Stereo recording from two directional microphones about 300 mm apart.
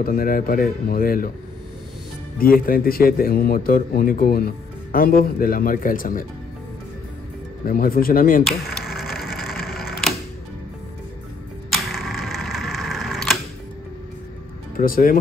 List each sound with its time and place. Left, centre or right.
0.0 s a man's voice: left
2.3 s a man's voice: left
7.6 s a man's voice: left
8.5 s a sound: centre
11.7 s a sound: centre
14.8 s a man's voice: left